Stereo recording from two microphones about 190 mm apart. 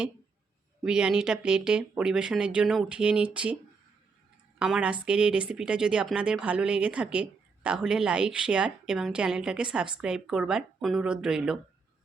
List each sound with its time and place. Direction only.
0.9 s speech: 5° right (ahead or behind)
4.6 s speech: 5° right (ahead or behind)